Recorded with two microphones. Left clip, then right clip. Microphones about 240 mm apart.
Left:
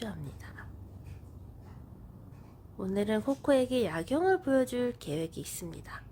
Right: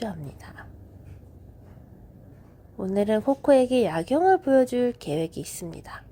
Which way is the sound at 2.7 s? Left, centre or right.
Centre.